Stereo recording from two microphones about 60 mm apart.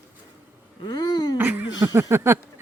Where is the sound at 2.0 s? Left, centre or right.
Right.